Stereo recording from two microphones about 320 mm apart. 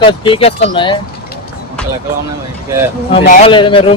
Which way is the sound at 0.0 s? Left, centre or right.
Centre.